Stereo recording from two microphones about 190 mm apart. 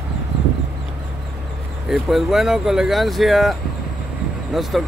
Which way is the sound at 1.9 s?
Centre (ahead or behind).